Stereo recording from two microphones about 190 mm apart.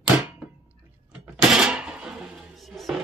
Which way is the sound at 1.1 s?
5° right (ahead or behind).